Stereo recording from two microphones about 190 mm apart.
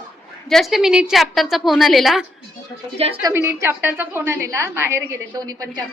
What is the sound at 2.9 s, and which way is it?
Speech, 30° right (ahead or behind).